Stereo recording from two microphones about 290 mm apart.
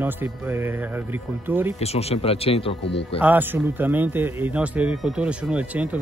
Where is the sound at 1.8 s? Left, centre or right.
Left.